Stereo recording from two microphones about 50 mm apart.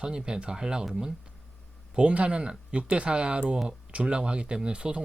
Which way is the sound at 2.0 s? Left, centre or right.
Right.